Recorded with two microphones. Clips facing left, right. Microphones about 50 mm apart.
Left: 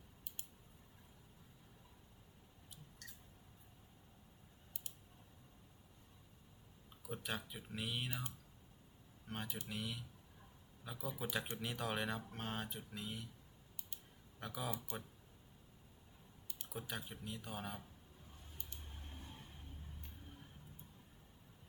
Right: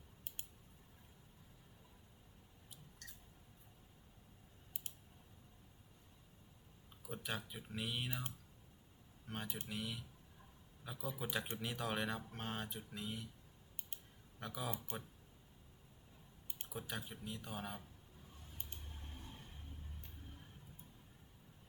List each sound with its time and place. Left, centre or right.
3.0 s a sound: centre
7.0 s speech: centre
9.2 s speech: centre
14.3 s speech: centre
14.9 s speech: right
16.6 s speech: centre